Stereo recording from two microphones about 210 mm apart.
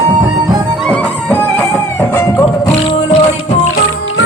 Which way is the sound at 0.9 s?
5° left (ahead or behind).